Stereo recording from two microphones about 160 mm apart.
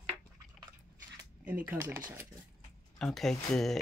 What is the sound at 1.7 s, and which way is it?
Speech, 15° right (ahead or behind).